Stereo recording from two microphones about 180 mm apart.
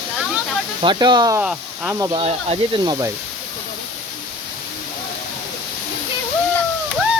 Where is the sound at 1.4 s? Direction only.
5° right (ahead or behind).